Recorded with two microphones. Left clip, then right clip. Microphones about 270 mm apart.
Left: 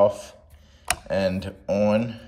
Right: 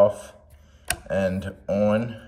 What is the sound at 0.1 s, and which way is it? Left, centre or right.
Speech, centre.